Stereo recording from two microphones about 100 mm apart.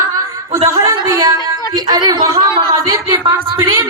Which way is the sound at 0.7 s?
35° right (ahead or behind).